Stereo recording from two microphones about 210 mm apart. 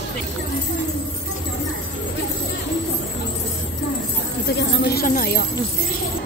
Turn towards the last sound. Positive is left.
turn(degrees=45)  # may be behind; listen again after turning